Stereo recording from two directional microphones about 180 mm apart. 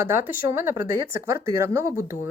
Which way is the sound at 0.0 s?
15° right (ahead or behind).